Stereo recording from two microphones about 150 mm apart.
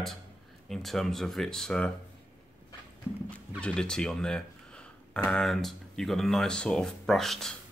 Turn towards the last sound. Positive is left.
turn(degrees=0)  # may be behind; listen again after turning